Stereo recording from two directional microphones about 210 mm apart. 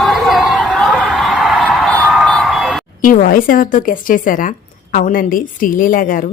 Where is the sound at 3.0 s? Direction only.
40° left (ahead or behind).